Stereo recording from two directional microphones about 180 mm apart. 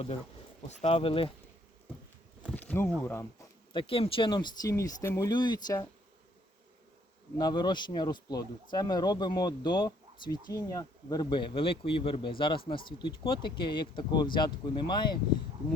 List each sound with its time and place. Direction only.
0.7 s speech: 35° left (ahead or behind)
2.5 s a sound: 10° left (ahead or behind)
3.0 s speech: 15° left (ahead or behind)
3.7 s speech: 30° left (ahead or behind)
7.3 s speech: 25° left (ahead or behind)